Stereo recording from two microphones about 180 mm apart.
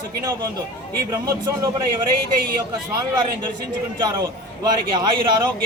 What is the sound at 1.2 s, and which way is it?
Speech, 20° right (ahead or behind).